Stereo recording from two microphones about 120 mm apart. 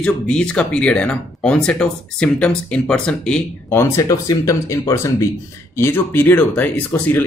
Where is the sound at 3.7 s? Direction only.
20° left (ahead or behind).